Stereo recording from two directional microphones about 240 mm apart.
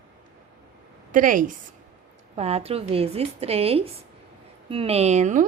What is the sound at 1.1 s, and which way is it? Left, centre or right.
A woman's voice, right.